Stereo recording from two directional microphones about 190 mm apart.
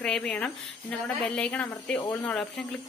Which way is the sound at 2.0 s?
20° left (ahead or behind).